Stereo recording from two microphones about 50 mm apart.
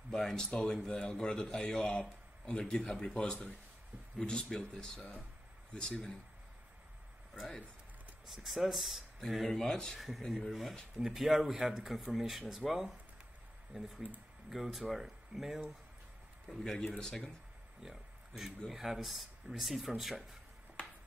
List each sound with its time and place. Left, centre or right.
0.1 s a man's voice: centre
1.8 s a man's voice: left
8.3 s speech: centre
9.9 s speech: centre
16.4 s a man's voice: centre
17.8 s a sound: centre
18.7 s speech: centre